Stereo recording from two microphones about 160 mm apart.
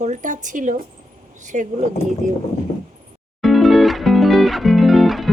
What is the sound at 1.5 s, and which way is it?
Speech, 50° right (ahead or behind).